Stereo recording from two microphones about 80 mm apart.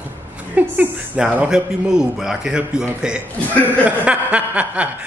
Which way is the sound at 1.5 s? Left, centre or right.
Centre.